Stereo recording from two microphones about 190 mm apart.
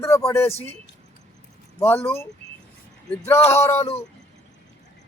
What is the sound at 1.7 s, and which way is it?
Speech, 10° left (ahead or behind).